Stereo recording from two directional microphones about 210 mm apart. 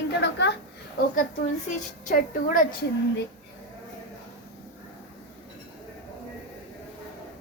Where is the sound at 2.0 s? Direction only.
40° left (ahead or behind).